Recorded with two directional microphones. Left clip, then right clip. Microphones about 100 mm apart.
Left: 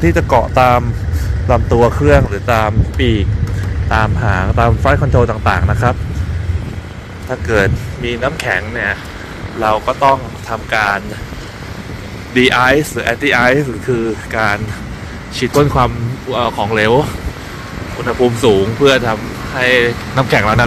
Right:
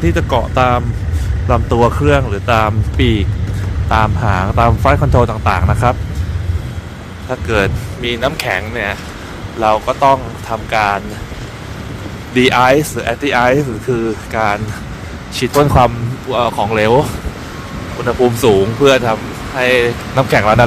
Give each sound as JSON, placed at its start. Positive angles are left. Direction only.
{"t": 0.0, "sound": "speech", "side_deg": -5}
{"t": 1.5, "sound": "speech", "side_deg": -30}
{"t": 2.1, "sound": "speech", "side_deg": -15}
{"t": 3.0, "sound": "speech", "side_deg": -45}
{"t": 3.9, "sound": "speech", "side_deg": -35}
{"t": 7.2, "sound": "speech", "side_deg": -30}
{"t": 8.0, "sound": "speech", "side_deg": -65}
{"t": 9.6, "sound": "speech", "side_deg": -35}
{"t": 10.5, "sound": "speech", "side_deg": -55}
{"t": 12.4, "sound": "speech", "side_deg": -50}
{"t": 13.0, "sound": "speech", "side_deg": -30}
{"t": 15.6, "sound": "speech", "side_deg": -75}
{"t": 18.2, "sound": "speech", "side_deg": -70}